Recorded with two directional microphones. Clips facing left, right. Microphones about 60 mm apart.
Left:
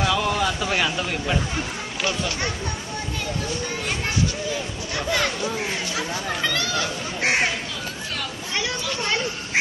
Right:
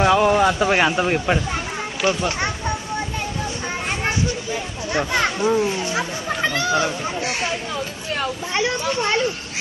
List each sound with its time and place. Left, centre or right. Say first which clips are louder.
0.0 s a man's voice: right 7 dB; right
4.9 s speech: right 4 dB; right
7.2 s speech: left 2 dB; left
8.2 s a sound: right 7 dB; right